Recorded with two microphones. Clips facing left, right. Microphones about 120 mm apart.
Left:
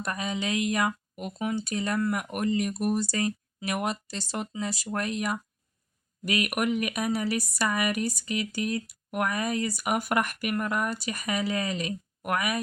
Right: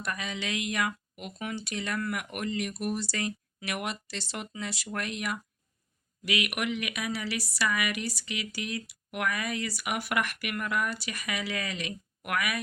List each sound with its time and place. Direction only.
0.0 s speech: 40° left (ahead or behind)